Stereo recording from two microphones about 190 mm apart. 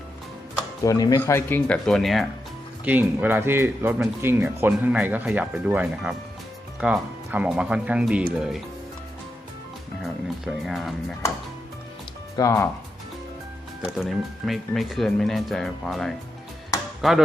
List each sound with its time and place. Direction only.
0.9 s speech: 20° left (ahead or behind); by 8.6 s 5° right (ahead or behind)
10.2 s speech: centre (ahead or behind)
12.4 s speech: 15° left (ahead or behind)
13.9 s speech: centre (ahead or behind)